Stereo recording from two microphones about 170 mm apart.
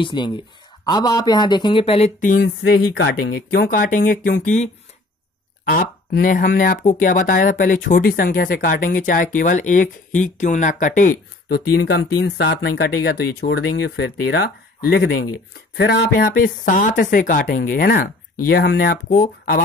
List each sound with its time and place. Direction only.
0.0 s speech: 25° left (ahead or behind); by 2.4 s 50° left (ahead or behind)
2.4 s speech: 75° left (ahead or behind); by 4.6 s 50° left (ahead or behind)
5.8 s speech: 55° left (ahead or behind)